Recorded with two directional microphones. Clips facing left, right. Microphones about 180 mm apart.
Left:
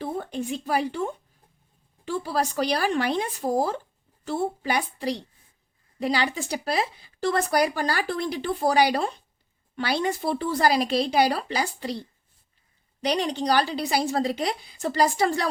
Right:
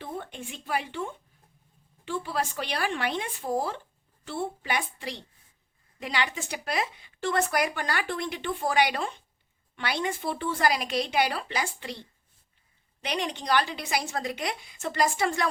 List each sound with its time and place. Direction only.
0.0 s speech: 40° left (ahead or behind)